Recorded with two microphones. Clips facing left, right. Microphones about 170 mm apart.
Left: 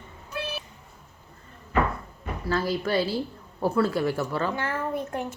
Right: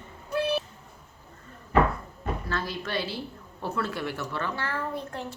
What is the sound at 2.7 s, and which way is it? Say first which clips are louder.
Speech: left 7 dB; 35° left (ahead or behind).